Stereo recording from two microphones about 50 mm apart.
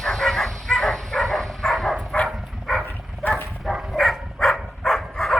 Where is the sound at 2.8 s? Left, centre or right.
Left.